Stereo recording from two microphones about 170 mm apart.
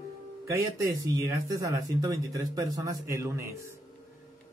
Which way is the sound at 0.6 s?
20° right (ahead or behind).